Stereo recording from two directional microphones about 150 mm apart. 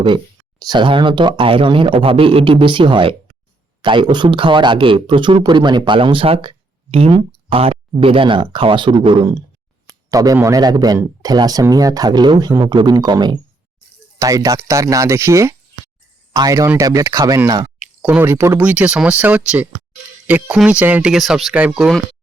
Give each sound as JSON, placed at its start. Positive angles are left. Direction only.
{"t": 0.6, "sound": "speech", "side_deg": -30}
{"t": 17.7, "sound": "speech", "side_deg": -10}